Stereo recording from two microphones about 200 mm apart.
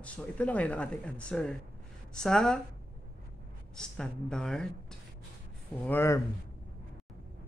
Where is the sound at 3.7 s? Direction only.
5° left (ahead or behind).